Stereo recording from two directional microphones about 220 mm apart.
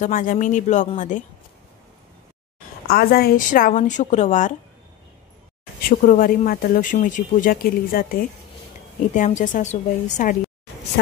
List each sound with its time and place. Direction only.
0.0 s speech: 40° left (ahead or behind)
2.9 s speech: 45° left (ahead or behind)
5.9 s speech: 40° left (ahead or behind)